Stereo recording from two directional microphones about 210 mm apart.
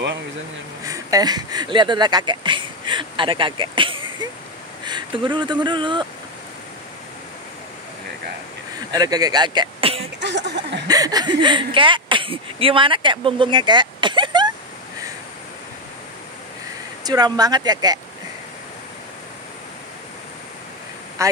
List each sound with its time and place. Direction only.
0.8 s speech: 15° right (ahead or behind)
8.9 s speech: 15° right (ahead or behind)
10.2 s speech: 55° right (ahead or behind)
10.9 s speech: 20° right (ahead or behind)
17.0 s speech: 20° right (ahead or behind)
21.2 s speech: 15° right (ahead or behind)